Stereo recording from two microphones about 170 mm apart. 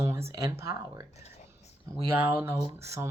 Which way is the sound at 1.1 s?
40° left (ahead or behind).